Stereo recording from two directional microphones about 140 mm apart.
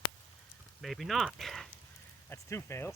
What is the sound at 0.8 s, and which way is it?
Speech, centre (ahead or behind).